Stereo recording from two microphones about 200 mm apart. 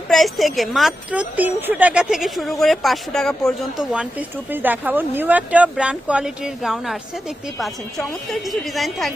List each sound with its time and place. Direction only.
0.1 s a woman's voice: centre (ahead or behind)